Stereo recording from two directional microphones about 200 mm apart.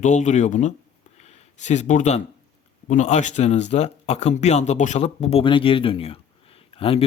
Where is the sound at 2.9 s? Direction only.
35° left (ahead or behind).